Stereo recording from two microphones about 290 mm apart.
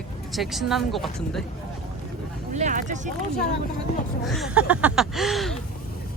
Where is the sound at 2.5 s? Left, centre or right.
Right.